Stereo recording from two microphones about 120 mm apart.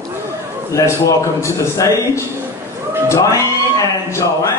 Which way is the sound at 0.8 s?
25° left (ahead or behind).